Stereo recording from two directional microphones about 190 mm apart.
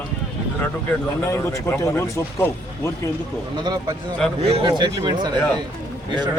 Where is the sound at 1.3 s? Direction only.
15° left (ahead or behind).